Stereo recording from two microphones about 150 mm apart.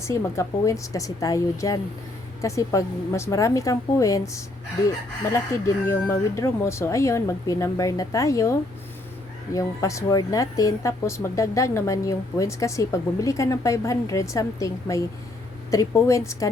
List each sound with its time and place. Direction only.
0.0 s speech: 20° left (ahead or behind)